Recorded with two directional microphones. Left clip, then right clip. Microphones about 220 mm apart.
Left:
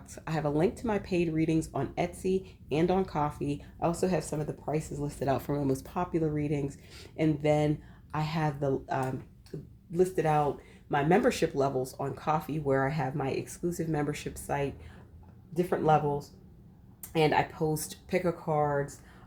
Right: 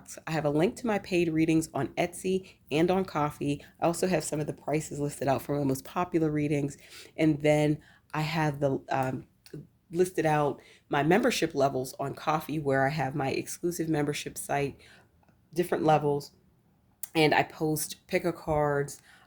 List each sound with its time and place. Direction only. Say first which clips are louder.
0.1 s speech: right 2 dB; 30° right (ahead or behind)